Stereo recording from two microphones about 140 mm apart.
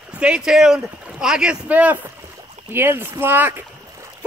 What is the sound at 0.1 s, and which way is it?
Speech, 5° right (ahead or behind).